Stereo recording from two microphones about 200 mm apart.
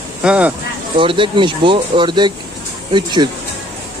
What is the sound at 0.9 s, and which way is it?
Speech, 25° right (ahead or behind).